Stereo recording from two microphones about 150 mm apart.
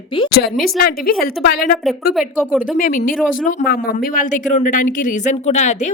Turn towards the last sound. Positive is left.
turn(degrees=50)  # may be behind; listen again after turning